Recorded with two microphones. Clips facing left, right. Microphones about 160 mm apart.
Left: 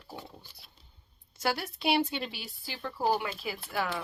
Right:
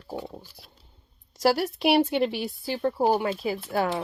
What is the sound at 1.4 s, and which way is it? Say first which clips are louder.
Speech: right 9 dB; 40° right (ahead or behind).